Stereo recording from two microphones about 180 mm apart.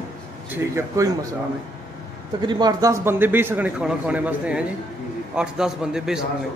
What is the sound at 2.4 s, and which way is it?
A man's voice, 25° right (ahead or behind).